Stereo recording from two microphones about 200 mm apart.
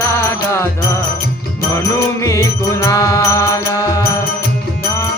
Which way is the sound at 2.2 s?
15° left (ahead or behind).